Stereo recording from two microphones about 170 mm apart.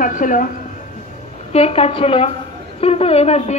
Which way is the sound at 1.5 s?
35° left (ahead or behind).